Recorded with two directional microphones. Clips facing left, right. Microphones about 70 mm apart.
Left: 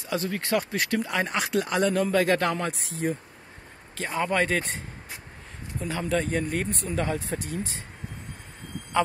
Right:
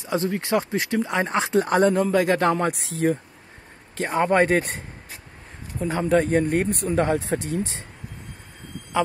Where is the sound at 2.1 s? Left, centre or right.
Centre.